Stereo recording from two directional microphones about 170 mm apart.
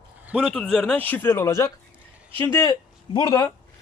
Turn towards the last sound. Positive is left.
turn(degrees=25)  # may be behind; listen again after turning